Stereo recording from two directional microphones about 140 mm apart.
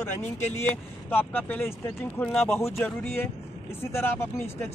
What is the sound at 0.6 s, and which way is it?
A man's voice, 15° left (ahead or behind).